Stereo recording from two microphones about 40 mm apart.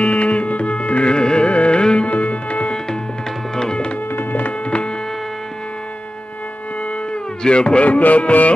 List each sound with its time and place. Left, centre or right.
0.0 s music: left
2.0 s music: left
3.5 s tabla: centre
4.1 s a sound: left
4.6 s hum: left
7.4 s speech: left
7.8 s music: left